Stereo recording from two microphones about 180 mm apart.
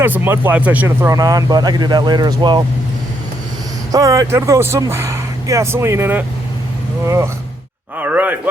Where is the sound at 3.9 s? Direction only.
20° right (ahead or behind).